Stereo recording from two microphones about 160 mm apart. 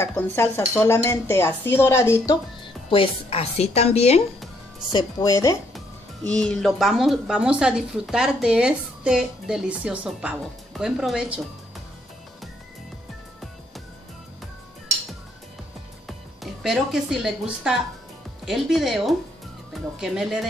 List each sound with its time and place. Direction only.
0.0 s speech: 15° left (ahead or behind)
2.6 s a woman's voice: 35° left (ahead or behind)
4.9 s speech: 20° left (ahead or behind)
6.2 s speech: 5° left (ahead or behind)
16.6 s speech: 5° right (ahead or behind)